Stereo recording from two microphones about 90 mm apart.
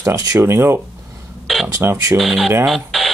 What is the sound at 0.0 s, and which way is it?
Speech, 35° right (ahead or behind).